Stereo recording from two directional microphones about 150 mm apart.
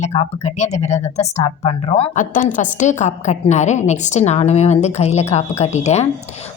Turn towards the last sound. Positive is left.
turn(degrees=45)  # may be behind; listen again after turning